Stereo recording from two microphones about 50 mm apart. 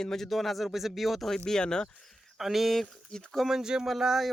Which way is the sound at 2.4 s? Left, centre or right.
Centre.